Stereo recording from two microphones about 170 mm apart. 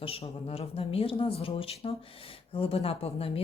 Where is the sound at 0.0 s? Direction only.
35° left (ahead or behind).